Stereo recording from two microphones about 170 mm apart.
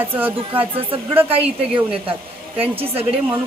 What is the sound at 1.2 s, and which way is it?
Speech, 35° right (ahead or behind).